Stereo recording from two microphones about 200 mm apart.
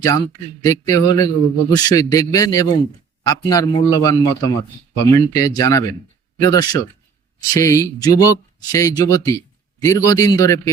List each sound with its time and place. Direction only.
0.0 s a man's voice: 20° left (ahead or behind)